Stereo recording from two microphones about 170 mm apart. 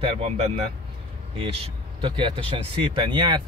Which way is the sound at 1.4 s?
30° right (ahead or behind).